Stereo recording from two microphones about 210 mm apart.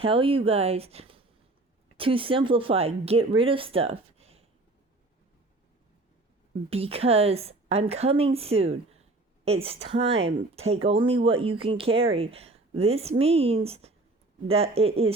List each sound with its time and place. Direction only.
0.0 s speech: 25° right (ahead or behind)
6.7 s a woman's voice: 30° right (ahead or behind)